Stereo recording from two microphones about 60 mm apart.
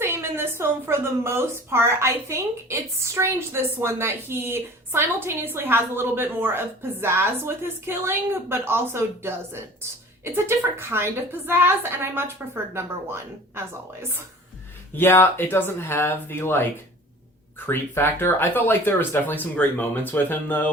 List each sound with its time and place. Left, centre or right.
0.0 s a woman's voice: right
3.7 s a woman's voice: right
14.9 s speech: left
17.7 s speech: left